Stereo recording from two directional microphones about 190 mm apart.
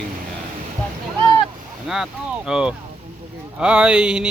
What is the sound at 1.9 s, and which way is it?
Speech, 5° right (ahead or behind).